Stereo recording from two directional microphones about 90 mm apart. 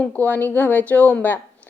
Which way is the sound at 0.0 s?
15° left (ahead or behind).